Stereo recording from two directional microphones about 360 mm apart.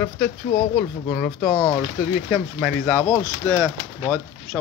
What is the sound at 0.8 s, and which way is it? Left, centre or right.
Speech, centre.